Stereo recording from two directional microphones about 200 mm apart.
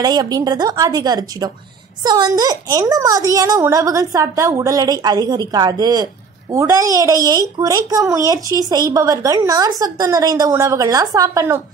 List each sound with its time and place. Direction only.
0.0 s a woman's voice: 20° right (ahead or behind)